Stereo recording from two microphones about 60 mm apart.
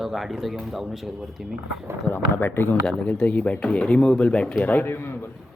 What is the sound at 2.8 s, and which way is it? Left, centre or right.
Speech, centre.